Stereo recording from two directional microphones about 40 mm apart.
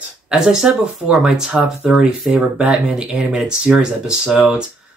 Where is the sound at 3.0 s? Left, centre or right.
Right.